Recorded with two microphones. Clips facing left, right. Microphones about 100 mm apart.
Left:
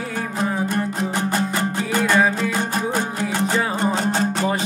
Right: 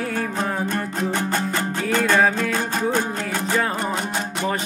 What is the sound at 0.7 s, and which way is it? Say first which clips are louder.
Music: left 1 dB; 15° left (ahead or behind).